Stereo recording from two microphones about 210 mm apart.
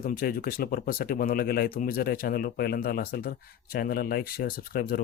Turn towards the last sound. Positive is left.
turn(degrees=45)  # may be behind; listen again after turning